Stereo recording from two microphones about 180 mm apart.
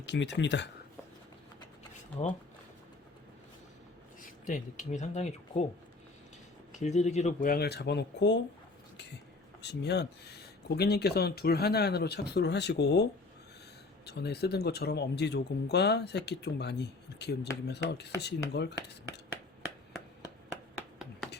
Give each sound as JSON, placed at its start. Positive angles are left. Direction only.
{"t": 0.0, "sound": "speech", "side_deg": 80}
{"t": 4.2, "sound": "speech", "side_deg": 45}
{"t": 6.7, "sound": "speech", "side_deg": 40}
{"t": 7.5, "sound": "speech", "side_deg": 65}
{"t": 9.6, "sound": "speech", "side_deg": 70}
{"t": 20.7, "sound": "a sound", "side_deg": -5}